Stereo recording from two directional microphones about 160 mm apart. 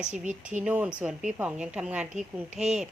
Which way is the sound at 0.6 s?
10° right (ahead or behind).